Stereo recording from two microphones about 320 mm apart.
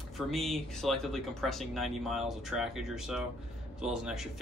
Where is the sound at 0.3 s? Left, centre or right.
Centre.